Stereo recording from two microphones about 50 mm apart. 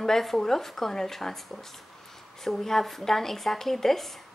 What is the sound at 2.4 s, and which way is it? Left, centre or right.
Speech, centre.